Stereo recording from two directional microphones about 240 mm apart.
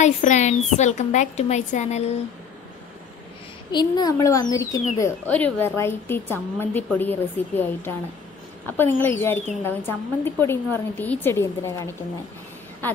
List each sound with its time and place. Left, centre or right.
0.0 s a woman's voice: left
3.7 s a woman's voice: centre